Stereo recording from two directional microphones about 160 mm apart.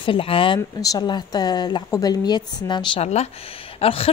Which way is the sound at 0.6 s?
20° left (ahead or behind).